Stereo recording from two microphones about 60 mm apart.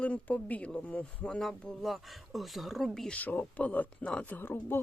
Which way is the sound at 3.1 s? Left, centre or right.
Left.